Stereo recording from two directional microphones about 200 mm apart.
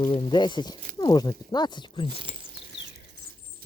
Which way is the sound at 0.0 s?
20° left (ahead or behind).